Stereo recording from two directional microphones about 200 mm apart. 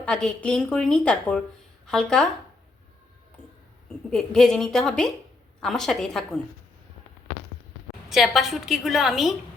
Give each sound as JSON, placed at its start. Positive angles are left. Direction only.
{"t": 0.0, "sound": "a woman's voice", "side_deg": 5}
{"t": 4.1, "sound": "a woman's voice", "side_deg": 5}
{"t": 8.1, "sound": "a woman's voice", "side_deg": 0}